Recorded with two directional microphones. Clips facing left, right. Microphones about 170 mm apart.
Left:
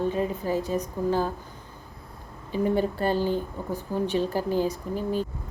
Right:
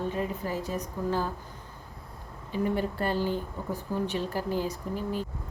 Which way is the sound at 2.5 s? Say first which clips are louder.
Left 4 dB; 30° left (ahead or behind).